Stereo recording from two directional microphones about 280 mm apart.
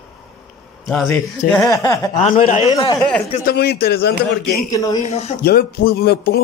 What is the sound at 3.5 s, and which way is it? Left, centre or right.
Speech, left.